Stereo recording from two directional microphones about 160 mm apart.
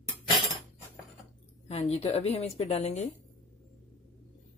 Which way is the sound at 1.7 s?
40° left (ahead or behind).